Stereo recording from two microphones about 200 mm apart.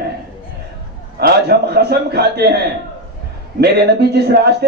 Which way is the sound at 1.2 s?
50° right (ahead or behind).